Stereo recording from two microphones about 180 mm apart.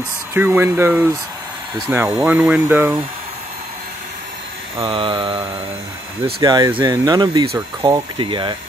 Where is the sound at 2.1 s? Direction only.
10° right (ahead or behind).